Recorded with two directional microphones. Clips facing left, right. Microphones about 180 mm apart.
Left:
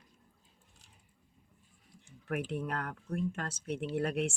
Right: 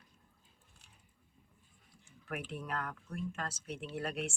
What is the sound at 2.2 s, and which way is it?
Speech, 55° left (ahead or behind).